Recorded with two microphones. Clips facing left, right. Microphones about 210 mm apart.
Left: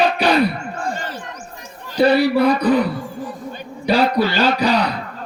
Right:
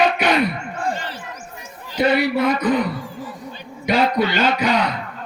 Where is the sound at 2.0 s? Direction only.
35° left (ahead or behind).